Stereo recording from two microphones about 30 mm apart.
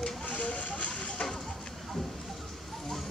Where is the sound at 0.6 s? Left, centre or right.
Left.